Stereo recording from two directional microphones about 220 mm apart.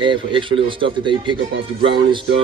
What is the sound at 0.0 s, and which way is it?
Speech, 20° right (ahead or behind).